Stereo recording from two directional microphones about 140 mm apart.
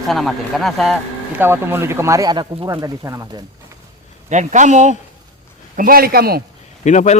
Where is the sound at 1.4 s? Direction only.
15° right (ahead or behind).